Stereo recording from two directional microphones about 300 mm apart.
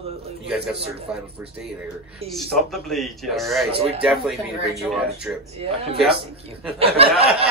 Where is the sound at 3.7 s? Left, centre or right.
Centre.